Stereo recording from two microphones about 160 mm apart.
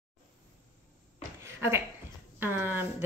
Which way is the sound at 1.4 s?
15° right (ahead or behind).